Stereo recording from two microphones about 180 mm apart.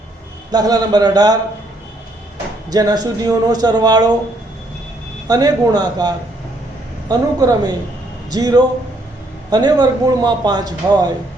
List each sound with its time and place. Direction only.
0.5 s speech: 20° right (ahead or behind)
2.6 s speech: 20° right (ahead or behind)
5.3 s speech: 20° right (ahead or behind)